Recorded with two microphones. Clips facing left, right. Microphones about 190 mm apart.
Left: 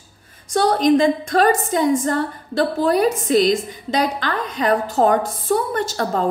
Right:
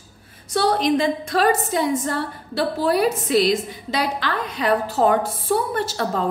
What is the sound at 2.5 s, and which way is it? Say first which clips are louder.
Speech: left 3 dB; 5° right (ahead or behind).